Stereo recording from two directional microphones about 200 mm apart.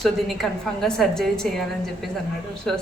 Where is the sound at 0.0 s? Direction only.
Centre (ahead or behind).